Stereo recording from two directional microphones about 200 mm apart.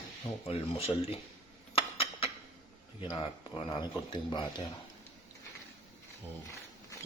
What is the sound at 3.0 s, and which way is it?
Speech, 25° left (ahead or behind).